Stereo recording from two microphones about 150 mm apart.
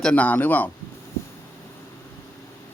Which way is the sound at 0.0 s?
10° left (ahead or behind).